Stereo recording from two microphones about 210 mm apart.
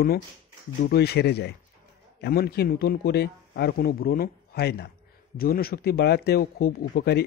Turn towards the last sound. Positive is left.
turn(degrees=50)  # may be behind; listen again after turning